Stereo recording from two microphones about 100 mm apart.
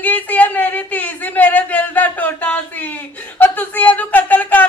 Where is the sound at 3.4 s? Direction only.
15° left (ahead or behind).